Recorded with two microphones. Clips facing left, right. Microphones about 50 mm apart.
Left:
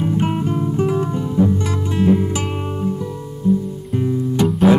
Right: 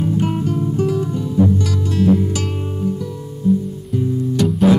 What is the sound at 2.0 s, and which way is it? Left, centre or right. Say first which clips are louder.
Music: right 1 dB; left.